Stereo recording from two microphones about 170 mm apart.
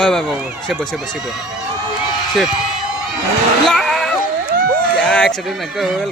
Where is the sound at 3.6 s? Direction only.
Centre (ahead or behind).